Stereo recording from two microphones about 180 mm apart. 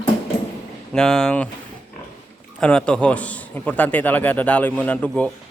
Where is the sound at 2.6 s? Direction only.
5° left (ahead or behind).